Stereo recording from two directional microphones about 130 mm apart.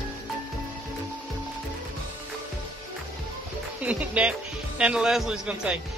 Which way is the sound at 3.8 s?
10° right (ahead or behind).